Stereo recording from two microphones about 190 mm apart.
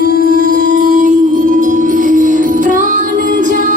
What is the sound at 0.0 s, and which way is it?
Music, 45° right (ahead or behind).